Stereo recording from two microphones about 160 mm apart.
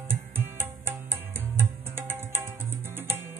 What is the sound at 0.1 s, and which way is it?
Music, 15° right (ahead or behind).